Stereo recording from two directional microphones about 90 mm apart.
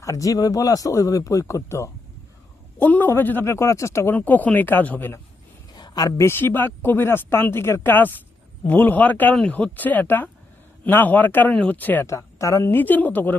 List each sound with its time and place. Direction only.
0.0 s speech: 35° left (ahead or behind)
2.7 s speech: 20° left (ahead or behind)
4.1 s speech: 20° left (ahead or behind)
5.7 s a sound: 50° left (ahead or behind)
6.2 s speech: 25° left (ahead or behind)
12.0 s speech: 35° left (ahead or behind)
12.7 s speech: 20° left (ahead or behind)